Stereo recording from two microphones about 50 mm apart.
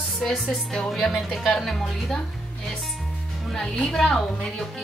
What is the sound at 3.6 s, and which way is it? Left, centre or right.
Speech, centre.